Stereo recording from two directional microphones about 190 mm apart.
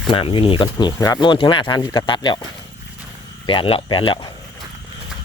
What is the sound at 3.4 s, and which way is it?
Speech, 25° left (ahead or behind).